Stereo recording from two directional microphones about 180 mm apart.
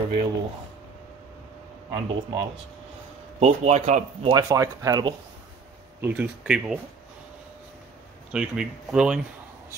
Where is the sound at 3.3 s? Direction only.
35° right (ahead or behind).